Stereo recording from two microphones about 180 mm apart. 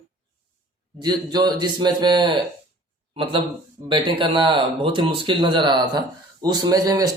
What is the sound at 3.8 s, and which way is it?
Speech, 25° right (ahead or behind).